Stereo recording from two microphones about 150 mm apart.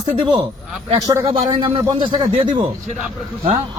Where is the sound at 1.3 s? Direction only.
35° right (ahead or behind).